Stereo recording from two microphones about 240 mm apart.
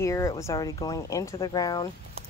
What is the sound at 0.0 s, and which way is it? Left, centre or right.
Speech, centre.